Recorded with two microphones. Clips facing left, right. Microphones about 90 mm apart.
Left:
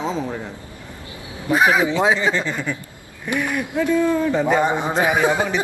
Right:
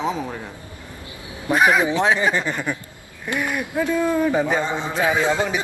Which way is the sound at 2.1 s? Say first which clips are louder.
Even; 15° right (ahead or behind).